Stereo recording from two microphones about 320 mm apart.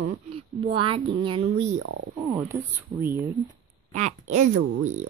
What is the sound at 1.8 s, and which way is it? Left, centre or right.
Speech, right.